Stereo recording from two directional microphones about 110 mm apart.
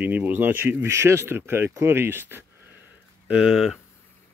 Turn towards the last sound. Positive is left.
turn(degrees=-5)  # may be behind; listen again after turning